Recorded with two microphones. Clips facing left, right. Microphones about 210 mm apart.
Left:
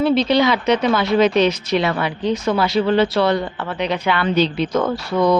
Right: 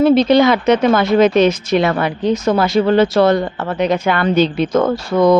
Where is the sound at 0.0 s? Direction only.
50° right (ahead or behind).